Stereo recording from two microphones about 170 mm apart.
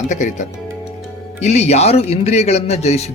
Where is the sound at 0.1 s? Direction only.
45° left (ahead or behind).